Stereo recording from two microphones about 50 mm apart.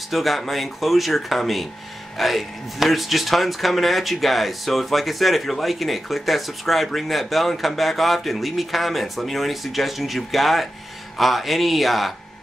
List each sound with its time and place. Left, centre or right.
0.1 s speech: centre